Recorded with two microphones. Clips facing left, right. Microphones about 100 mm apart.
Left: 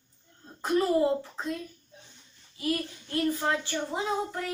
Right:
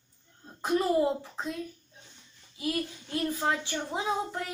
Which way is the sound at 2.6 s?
5° right (ahead or behind).